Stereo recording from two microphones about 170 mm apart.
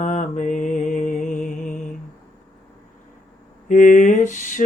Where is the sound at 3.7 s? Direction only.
50° left (ahead or behind).